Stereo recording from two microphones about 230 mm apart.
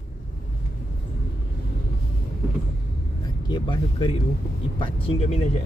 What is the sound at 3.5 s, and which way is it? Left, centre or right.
Speech, left.